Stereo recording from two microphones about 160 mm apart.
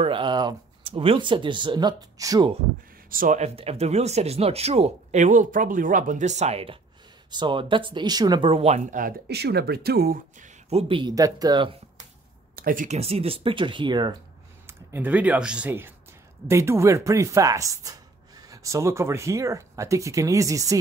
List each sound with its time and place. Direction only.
0.0 s speech: 30° right (ahead or behind)
3.1 s speech: 55° right (ahead or behind); by 8.8 s 40° right (ahead or behind)
8.9 s speech: 75° right (ahead or behind)
10.7 s speech: 35° right (ahead or behind)
12.5 s speech: 60° right (ahead or behind); by 14.1 s 30° right (ahead or behind)
14.7 s speech: 15° right (ahead or behind)